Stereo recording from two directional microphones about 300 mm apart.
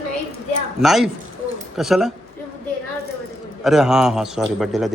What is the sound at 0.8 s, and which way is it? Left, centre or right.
A man's voice, centre.